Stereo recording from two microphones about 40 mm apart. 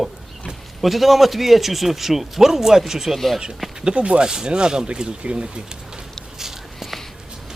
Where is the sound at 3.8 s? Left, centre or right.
Right.